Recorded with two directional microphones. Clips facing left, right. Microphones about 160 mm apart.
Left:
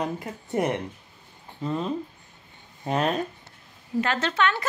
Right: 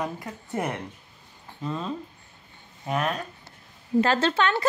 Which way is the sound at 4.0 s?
30° right (ahead or behind).